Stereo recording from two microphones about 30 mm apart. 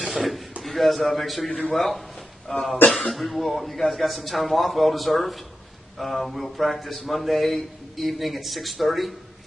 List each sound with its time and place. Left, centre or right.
0.0 s a man's voice: centre
2.5 s speech: left
3.1 s speech: centre